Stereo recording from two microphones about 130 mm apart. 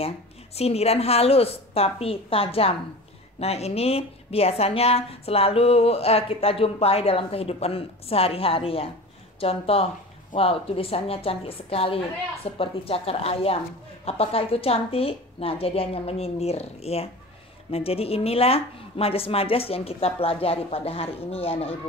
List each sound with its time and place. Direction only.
0.6 s a woman's voice: 50° left (ahead or behind)